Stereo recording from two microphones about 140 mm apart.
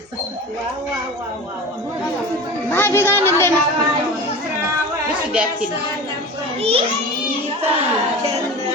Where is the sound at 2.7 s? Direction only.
15° left (ahead or behind).